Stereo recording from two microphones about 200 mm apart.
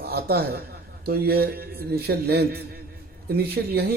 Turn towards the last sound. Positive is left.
turn(degrees=-50)  # may be behind; listen again after turning